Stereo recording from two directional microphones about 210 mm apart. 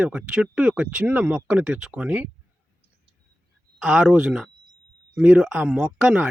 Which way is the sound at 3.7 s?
Centre (ahead or behind).